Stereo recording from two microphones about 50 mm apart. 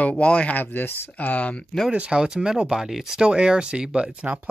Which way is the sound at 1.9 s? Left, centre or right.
Centre.